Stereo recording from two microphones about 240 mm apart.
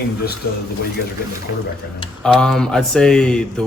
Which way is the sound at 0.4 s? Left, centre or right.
Left.